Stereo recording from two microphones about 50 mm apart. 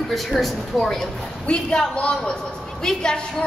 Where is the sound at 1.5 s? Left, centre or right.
Left.